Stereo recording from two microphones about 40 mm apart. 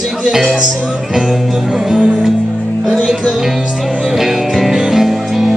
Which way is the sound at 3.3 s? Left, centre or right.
Centre.